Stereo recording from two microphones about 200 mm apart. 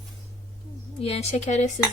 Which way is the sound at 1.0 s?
30° left (ahead or behind).